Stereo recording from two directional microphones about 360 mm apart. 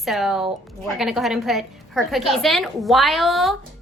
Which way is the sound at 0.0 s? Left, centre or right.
Centre.